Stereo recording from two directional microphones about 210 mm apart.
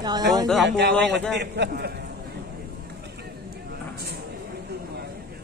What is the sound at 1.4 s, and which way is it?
Speech, 50° right (ahead or behind).